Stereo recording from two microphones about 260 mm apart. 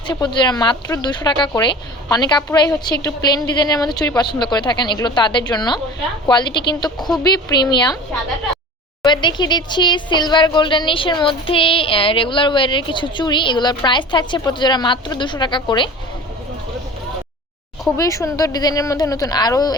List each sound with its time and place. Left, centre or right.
0.1 s speech: centre
9.0 s speech: centre
17.9 s speech: centre